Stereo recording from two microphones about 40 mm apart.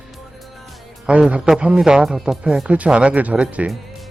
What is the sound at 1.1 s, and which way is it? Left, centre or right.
Speech, right.